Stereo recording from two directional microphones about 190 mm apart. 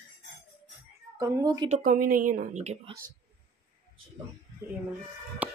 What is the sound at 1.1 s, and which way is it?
Speech, 15° right (ahead or behind).